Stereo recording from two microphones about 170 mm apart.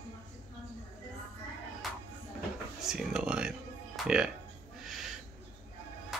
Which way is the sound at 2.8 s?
5° right (ahead or behind).